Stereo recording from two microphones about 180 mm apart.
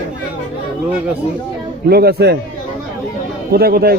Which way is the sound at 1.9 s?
60° right (ahead or behind).